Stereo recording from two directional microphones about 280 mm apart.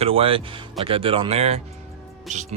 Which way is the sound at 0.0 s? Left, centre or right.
Centre.